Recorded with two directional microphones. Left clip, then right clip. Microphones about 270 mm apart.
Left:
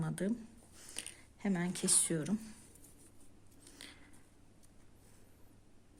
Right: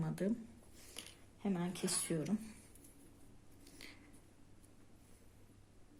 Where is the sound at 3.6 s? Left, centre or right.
Centre.